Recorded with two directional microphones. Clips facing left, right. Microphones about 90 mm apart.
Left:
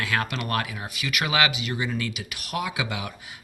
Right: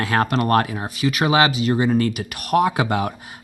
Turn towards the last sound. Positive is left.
turn(degrees=-45)  # may be behind; listen again after turning